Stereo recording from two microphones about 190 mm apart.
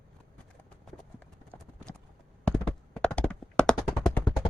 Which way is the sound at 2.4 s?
5° left (ahead or behind).